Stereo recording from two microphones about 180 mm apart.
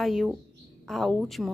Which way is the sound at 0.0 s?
Centre (ahead or behind).